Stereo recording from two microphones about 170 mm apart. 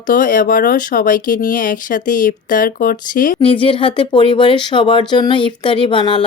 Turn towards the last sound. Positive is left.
turn(degrees=30)  # may be behind; listen again after turning